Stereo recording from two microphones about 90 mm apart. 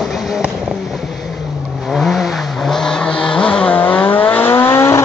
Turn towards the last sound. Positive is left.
turn(degrees=30)  # may be behind; listen again after turning